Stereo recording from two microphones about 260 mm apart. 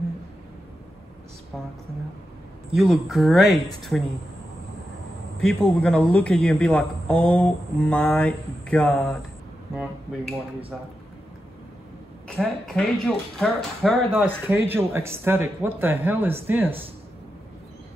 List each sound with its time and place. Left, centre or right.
2.7 s a man's voice: centre
5.4 s a man's voice: centre
12.4 s a man's voice: centre